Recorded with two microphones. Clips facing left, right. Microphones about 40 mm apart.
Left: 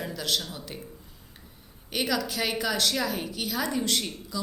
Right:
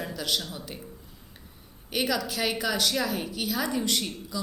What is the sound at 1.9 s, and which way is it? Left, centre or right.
A woman's voice, centre.